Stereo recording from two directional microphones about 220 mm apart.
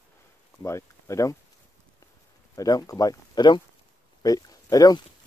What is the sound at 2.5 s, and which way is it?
Speech, 15° left (ahead or behind).